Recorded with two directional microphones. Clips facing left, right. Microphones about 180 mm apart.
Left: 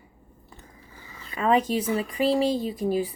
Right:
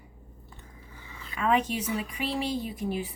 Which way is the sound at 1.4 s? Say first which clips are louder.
Left 4 dB; 35° left (ahead or behind).